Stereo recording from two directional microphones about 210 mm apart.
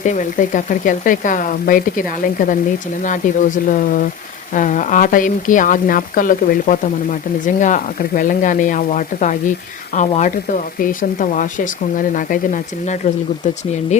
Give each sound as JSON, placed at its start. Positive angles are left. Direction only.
{"t": 0.0, "sound": "speech", "side_deg": 35}